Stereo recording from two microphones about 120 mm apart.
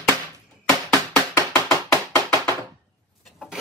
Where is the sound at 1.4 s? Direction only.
25° left (ahead or behind).